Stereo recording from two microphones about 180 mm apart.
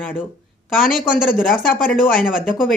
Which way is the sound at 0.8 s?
50° left (ahead or behind).